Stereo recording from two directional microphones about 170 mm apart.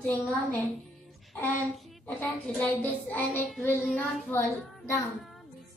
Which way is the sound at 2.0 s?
10° left (ahead or behind).